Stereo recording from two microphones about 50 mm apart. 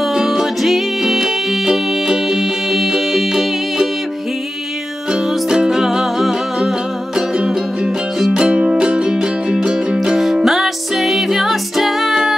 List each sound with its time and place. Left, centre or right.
0.0 s music: centre
5.1 s music: centre